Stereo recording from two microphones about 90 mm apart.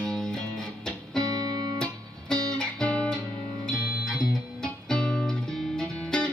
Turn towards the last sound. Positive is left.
turn(degrees=10)  # may be behind; listen again after turning